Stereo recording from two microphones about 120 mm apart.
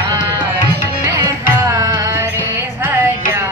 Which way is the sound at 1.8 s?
30° right (ahead or behind).